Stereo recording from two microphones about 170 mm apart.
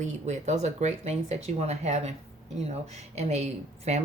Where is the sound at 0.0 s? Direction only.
45° right (ahead or behind).